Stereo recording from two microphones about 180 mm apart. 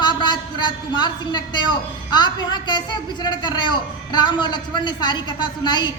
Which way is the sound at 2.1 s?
25° left (ahead or behind).